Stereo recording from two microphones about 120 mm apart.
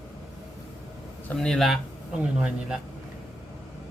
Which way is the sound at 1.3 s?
5° left (ahead or behind).